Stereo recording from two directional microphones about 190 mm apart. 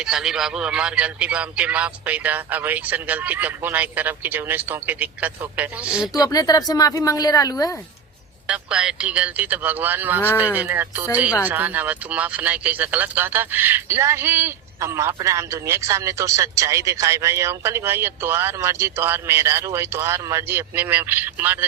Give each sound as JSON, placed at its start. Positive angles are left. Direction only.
{"t": 0.0, "sound": "speech", "side_deg": -5}
{"t": 6.1, "sound": "a woman's voice", "side_deg": 20}
{"t": 8.4, "sound": "speech", "side_deg": -5}